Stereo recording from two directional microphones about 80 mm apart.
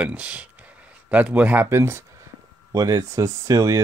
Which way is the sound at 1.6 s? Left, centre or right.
Right.